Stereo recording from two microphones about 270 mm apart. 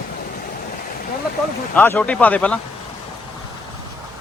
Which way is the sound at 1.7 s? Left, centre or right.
Centre.